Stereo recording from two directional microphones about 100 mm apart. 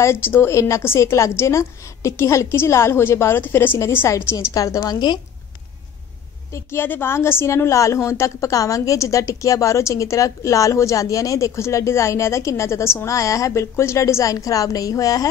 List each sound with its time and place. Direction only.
0.0 s a woman's voice: 25° left (ahead or behind); by 5.2 s 45° left (ahead or behind)
6.5 s a woman's voice: 25° left (ahead or behind)